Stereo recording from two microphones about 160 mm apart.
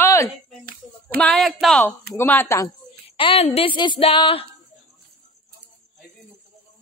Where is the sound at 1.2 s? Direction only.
Centre (ahead or behind).